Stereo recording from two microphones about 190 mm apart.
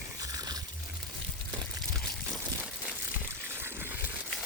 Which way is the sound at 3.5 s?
10° right (ahead or behind).